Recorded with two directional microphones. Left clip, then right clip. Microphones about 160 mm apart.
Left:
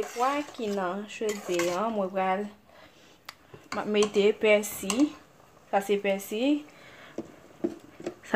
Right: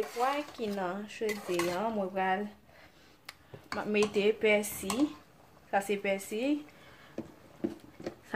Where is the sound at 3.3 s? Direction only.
30° left (ahead or behind).